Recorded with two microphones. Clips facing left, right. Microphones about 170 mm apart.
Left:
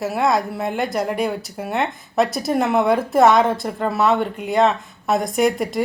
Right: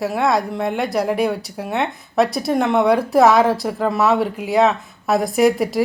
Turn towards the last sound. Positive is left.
turn(degrees=0)  # may be behind; listen again after turning